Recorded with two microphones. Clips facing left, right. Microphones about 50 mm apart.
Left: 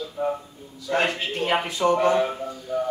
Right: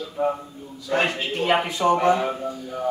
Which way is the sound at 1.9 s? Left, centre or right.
Right.